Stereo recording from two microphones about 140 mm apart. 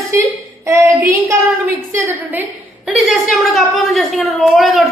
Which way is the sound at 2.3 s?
5° right (ahead or behind).